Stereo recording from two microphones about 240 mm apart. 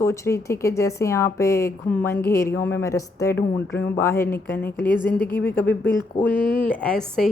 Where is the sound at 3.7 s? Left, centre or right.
Left.